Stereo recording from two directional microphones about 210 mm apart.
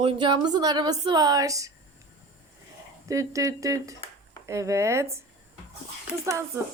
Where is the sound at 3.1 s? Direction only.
15° right (ahead or behind).